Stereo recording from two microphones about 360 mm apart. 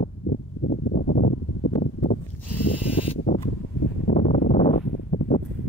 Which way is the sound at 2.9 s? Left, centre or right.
Centre.